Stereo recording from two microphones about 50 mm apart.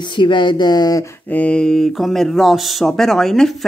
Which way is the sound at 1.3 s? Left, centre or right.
Left.